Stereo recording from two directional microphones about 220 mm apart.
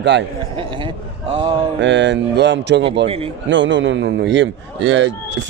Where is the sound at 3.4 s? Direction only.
55° right (ahead or behind).